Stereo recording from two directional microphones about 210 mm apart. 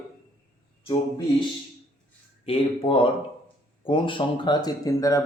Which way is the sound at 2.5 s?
25° left (ahead or behind).